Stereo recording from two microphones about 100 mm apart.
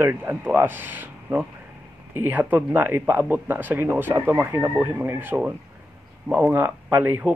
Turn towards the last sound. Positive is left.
turn(degrees=-20)  # may be behind; listen again after turning